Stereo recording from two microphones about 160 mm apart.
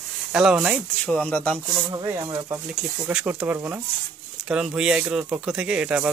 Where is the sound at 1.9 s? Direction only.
25° right (ahead or behind).